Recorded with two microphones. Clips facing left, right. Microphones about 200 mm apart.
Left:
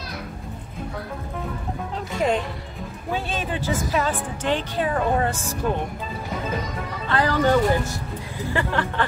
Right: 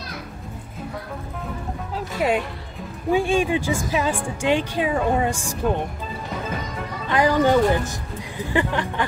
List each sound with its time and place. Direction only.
2.0 s music: 5° right (ahead or behind)
3.1 s speech: 10° right (ahead or behind)
7.1 s speech: 15° right (ahead or behind)